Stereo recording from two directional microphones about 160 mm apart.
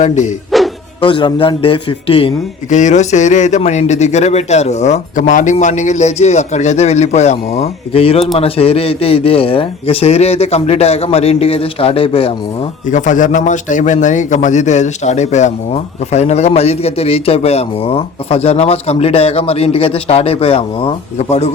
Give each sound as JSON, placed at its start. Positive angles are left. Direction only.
{"t": 0.0, "sound": "speech", "side_deg": 50}
{"t": 1.0, "sound": "a man's voice", "side_deg": 30}
{"t": 2.6, "sound": "a man's voice", "side_deg": 50}
{"t": 12.9, "sound": "a man's voice", "side_deg": 50}